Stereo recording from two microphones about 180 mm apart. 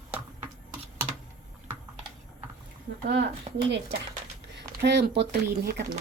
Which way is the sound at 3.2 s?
30° right (ahead or behind).